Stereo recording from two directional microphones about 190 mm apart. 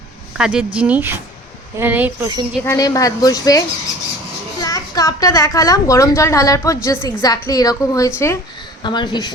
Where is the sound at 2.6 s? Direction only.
20° left (ahead or behind).